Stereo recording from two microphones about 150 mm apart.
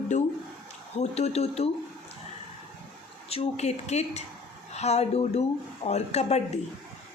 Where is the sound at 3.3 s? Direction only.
45° left (ahead or behind).